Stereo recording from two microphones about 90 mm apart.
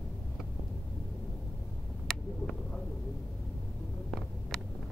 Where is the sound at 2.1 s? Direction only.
5° left (ahead or behind).